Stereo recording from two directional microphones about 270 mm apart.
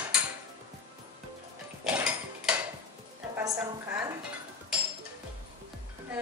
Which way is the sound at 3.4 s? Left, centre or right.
Centre.